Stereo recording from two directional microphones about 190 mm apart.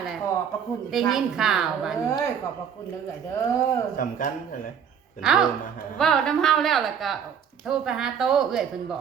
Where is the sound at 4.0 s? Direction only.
45° left (ahead or behind).